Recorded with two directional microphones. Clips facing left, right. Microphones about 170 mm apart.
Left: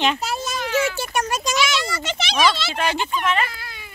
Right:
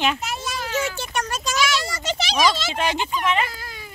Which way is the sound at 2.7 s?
20° right (ahead or behind).